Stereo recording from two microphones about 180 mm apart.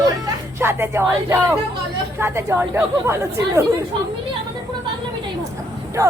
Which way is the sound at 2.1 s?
15° right (ahead or behind).